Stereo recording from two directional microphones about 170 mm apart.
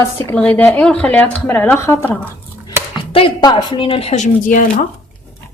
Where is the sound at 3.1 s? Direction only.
30° left (ahead or behind); by 4.9 s 50° left (ahead or behind).